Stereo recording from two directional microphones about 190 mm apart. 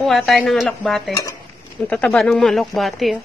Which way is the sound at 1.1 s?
15° left (ahead or behind).